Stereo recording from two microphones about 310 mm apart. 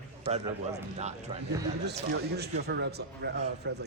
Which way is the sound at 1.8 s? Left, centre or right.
Right.